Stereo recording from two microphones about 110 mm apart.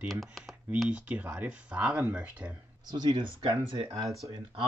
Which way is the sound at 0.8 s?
15° right (ahead or behind).